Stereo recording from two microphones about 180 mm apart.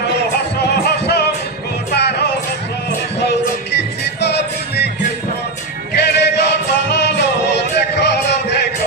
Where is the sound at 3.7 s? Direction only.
70° left (ahead or behind).